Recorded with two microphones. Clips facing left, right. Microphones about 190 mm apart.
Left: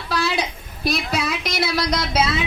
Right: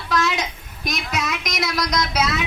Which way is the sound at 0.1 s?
35° left (ahead or behind).